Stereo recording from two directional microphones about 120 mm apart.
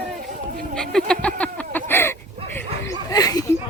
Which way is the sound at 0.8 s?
5° left (ahead or behind).